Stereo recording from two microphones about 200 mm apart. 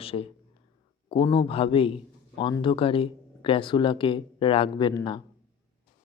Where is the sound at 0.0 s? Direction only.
30° left (ahead or behind).